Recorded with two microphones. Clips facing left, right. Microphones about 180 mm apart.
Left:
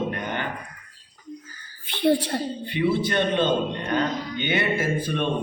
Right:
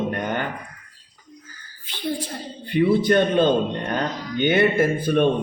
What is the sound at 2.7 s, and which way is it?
Speech, 50° right (ahead or behind).